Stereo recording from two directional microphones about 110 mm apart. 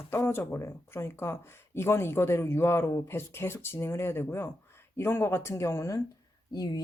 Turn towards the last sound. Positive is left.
turn(degrees=35)  # may be behind; listen again after turning